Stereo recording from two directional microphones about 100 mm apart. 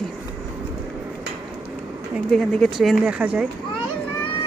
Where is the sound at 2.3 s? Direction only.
5° left (ahead or behind); by 3.5 s 10° right (ahead or behind).